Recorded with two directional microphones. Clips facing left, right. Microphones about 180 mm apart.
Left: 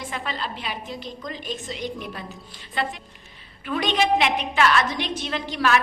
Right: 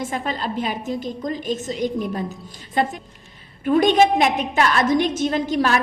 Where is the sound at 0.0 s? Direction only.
45° right (ahead or behind).